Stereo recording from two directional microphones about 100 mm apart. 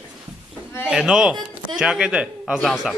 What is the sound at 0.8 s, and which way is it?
A man's voice, 5° right (ahead or behind).